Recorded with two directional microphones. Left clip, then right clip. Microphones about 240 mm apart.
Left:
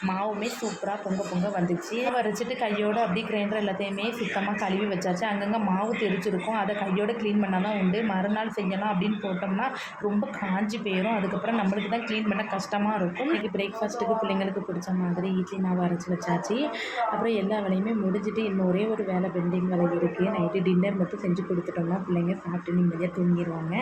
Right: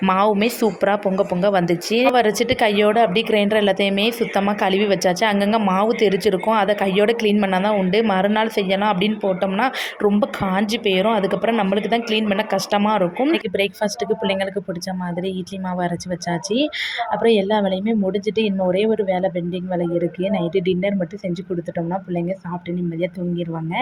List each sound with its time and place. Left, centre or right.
0.0 s speech: right
16.5 s speech: right
20.5 s speech: right